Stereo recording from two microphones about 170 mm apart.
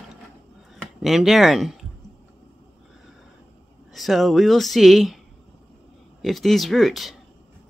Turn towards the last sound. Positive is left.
turn(degrees=0)  # may be behind; listen again after turning